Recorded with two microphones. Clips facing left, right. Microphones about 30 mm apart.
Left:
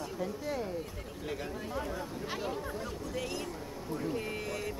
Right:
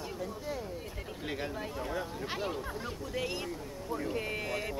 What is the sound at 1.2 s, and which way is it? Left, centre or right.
Speech, right.